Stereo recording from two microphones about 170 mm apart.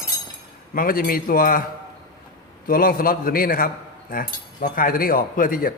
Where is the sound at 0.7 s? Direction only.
55° left (ahead or behind).